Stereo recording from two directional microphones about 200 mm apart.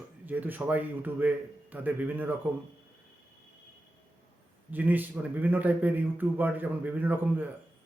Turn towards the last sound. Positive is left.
turn(degrees=-10)  # may be behind; listen again after turning